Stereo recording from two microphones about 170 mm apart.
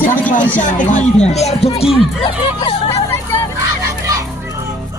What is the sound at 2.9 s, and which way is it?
Hubbub, 15° left (ahead or behind).